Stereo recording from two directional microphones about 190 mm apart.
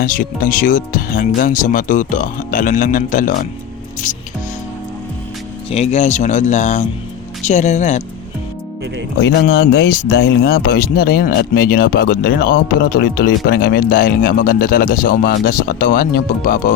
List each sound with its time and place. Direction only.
0.0 s speech: 45° left (ahead or behind)
5.7 s speech: 35° left (ahead or behind)
9.2 s speech: 65° left (ahead or behind); by 16.7 s 45° left (ahead or behind)